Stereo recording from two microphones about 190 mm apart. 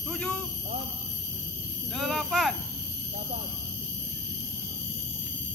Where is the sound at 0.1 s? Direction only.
5° left (ahead or behind).